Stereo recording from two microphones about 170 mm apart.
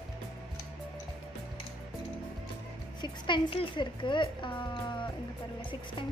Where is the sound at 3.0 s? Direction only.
30° left (ahead or behind).